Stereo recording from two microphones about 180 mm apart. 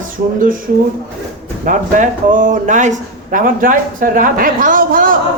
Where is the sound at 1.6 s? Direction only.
50° right (ahead or behind).